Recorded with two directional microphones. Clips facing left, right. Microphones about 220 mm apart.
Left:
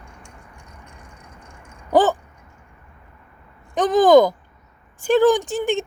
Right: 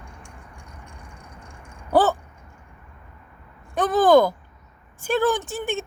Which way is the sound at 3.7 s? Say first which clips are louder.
Left 3 dB; 15° left (ahead or behind).